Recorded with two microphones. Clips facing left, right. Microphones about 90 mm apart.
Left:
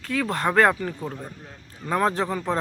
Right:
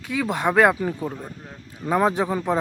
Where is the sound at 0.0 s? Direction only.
10° right (ahead or behind).